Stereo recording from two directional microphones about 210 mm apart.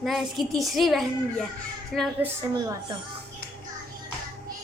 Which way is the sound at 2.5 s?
20° right (ahead or behind).